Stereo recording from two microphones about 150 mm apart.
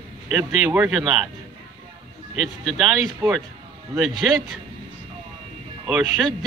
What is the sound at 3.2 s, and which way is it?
Speech, 15° right (ahead or behind).